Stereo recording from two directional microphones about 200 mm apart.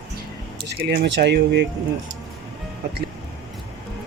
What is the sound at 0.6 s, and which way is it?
Speech, 55° right (ahead or behind).